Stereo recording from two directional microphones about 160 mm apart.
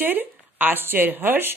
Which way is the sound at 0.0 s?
10° right (ahead or behind).